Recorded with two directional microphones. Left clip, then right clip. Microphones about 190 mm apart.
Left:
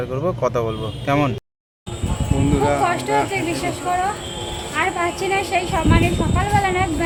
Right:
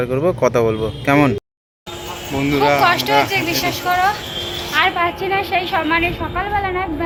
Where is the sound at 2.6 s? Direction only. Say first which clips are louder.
Right 5 dB; 5° right (ahead or behind).